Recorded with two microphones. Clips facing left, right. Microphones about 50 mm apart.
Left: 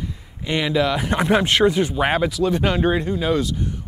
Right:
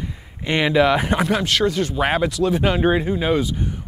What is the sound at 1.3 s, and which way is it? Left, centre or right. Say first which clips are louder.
Speech: left 3 dB; left.